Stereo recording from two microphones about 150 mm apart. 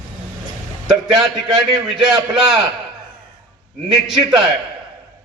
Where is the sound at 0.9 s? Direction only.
5° right (ahead or behind).